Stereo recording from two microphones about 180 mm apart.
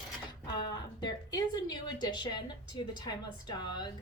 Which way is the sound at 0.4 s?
25° left (ahead or behind).